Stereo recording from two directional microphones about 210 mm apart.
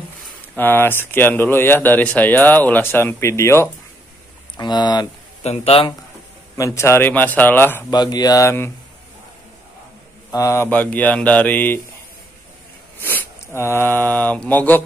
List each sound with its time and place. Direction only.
0.6 s speech: 10° left (ahead or behind)
5.4 s speech: 30° left (ahead or behind)
6.5 s speech: 15° left (ahead or behind)
10.3 s speech: 15° left (ahead or behind)
13.0 s speech: 10° left (ahead or behind)